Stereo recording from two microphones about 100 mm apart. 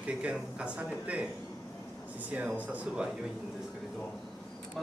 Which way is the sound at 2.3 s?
15° right (ahead or behind).